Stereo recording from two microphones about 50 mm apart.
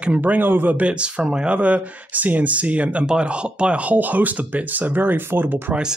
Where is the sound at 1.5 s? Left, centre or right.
Right.